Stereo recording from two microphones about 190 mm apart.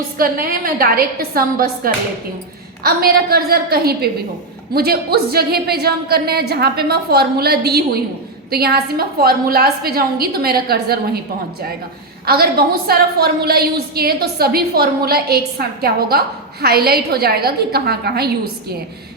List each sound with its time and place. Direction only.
0.2 s a woman's voice: 50° right (ahead or behind)
12.2 s a woman's voice: 55° right (ahead or behind)